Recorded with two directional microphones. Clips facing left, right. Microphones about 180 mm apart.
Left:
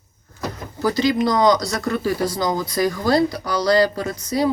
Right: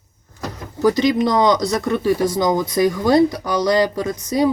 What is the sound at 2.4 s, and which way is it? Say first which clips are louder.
Speech: right 4 dB; 20° right (ahead or behind).